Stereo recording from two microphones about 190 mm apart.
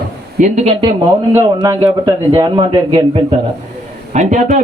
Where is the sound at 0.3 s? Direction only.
40° right (ahead or behind).